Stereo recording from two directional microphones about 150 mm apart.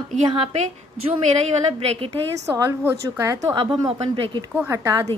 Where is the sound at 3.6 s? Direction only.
35° right (ahead or behind).